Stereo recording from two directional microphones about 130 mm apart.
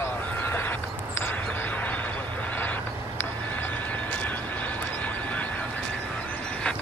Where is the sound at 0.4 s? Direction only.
15° left (ahead or behind).